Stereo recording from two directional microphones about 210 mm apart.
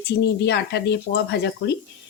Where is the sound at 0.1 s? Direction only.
55° left (ahead or behind).